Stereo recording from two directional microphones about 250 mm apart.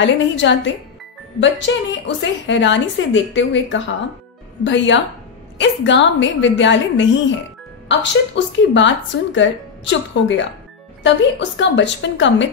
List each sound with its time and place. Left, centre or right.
0.0 s a woman's voice: left
8.4 s a woman's voice: left